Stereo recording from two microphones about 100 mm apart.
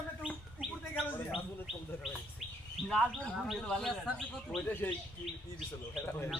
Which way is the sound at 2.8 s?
Centre (ahead or behind).